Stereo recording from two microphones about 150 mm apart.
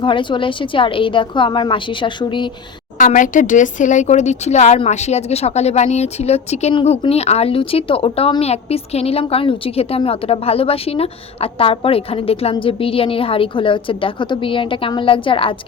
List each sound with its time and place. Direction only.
0.0 s a woman's voice: 35° left (ahead or behind)
3.0 s a woman's voice: 60° left (ahead or behind); by 15.5 s 35° left (ahead or behind)